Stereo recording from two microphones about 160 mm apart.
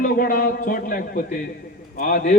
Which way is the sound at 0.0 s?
60° left (ahead or behind).